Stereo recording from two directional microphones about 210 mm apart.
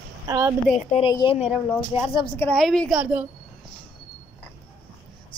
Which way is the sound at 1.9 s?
10° right (ahead or behind).